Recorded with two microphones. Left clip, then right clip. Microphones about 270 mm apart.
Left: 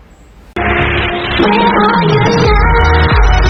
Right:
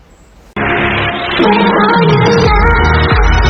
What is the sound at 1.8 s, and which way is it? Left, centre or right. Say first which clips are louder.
Music: right 1 dB; centre.